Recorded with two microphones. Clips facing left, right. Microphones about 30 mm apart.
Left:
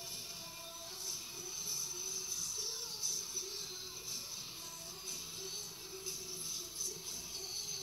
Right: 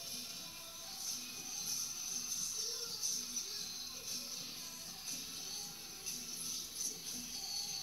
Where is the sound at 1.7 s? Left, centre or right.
Right.